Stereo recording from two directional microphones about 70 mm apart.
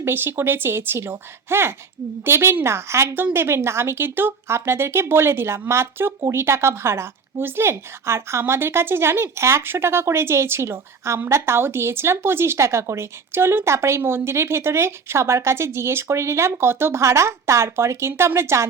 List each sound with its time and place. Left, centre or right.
0.0 s speech: right